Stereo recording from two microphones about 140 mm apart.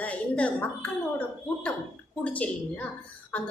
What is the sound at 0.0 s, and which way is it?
Speech, 10° left (ahead or behind).